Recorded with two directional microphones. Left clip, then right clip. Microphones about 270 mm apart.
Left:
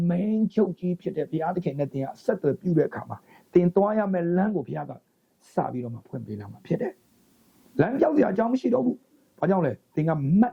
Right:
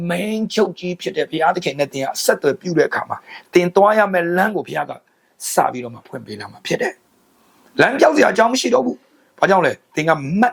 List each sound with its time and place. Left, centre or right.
0.0 s speech: centre
8.8 s a sound: right
9.4 s speech: centre